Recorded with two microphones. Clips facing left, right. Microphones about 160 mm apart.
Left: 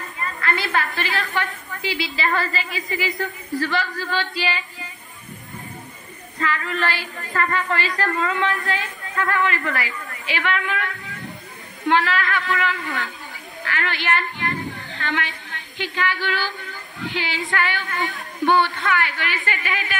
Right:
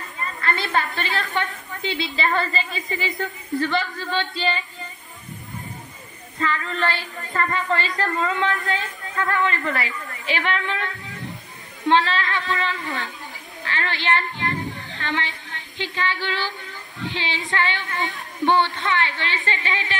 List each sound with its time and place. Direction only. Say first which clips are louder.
0.4 s a woman's voice: even; 25° right (ahead or behind)
6.4 s a woman's voice: even; 25° right (ahead or behind)